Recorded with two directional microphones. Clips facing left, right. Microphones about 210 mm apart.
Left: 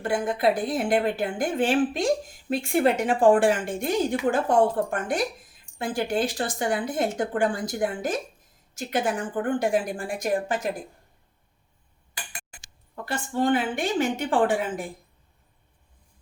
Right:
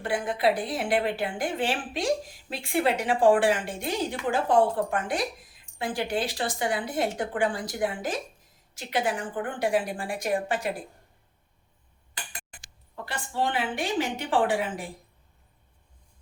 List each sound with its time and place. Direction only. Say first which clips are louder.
0.0 s a woman's voice: left 2 dB; 45° left (ahead or behind)
13.1 s a woman's voice: left 6 dB; 45° left (ahead or behind)